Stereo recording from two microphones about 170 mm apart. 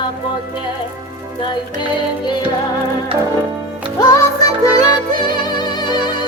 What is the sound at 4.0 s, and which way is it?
Music, 20° left (ahead or behind).